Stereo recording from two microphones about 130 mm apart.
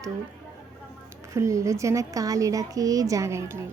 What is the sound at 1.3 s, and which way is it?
Speech, 25° right (ahead or behind).